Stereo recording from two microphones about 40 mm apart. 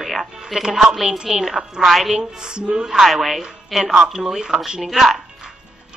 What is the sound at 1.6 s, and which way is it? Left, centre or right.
Speech, centre.